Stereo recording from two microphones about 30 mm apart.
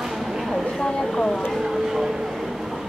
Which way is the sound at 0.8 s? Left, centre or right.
Centre.